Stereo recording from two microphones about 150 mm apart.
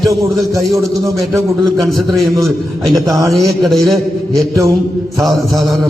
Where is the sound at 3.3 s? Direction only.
Centre (ahead or behind).